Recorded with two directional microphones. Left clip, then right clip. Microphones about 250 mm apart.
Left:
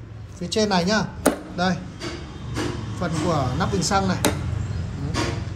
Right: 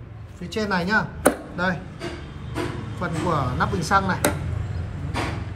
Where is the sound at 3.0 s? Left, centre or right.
Centre.